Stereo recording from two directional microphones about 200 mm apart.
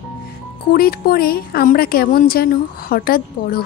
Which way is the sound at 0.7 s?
50° left (ahead or behind).